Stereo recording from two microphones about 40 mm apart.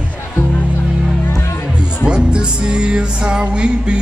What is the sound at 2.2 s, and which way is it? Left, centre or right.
Music, right.